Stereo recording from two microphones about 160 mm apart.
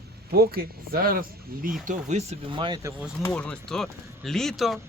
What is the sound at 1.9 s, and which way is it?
Speech, 45° right (ahead or behind).